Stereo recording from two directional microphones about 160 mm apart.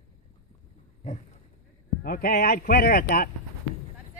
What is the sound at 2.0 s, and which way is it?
Speech, 65° left (ahead or behind).